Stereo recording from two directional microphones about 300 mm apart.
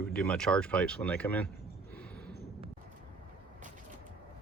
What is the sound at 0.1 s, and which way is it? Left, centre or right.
Speech, centre.